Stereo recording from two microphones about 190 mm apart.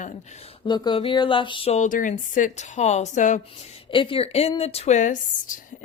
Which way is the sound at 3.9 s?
25° left (ahead or behind).